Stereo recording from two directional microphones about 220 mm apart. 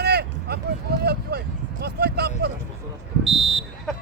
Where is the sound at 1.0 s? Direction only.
45° right (ahead or behind).